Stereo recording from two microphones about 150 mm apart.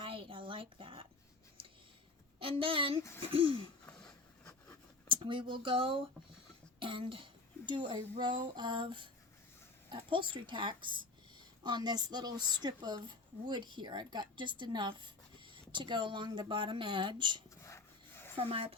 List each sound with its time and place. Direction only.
0.0 s a sound: 35° right (ahead or behind)
2.4 s a woman's voice: 35° right (ahead or behind)
3.8 s a sound: 10° left (ahead or behind)
5.0 s a child's voice: 35° right (ahead or behind)
17.6 s dog: 15° left (ahead or behind)
18.3 s speech: 40° right (ahead or behind)